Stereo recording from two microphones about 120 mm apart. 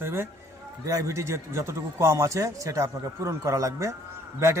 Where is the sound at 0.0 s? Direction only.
20° right (ahead or behind).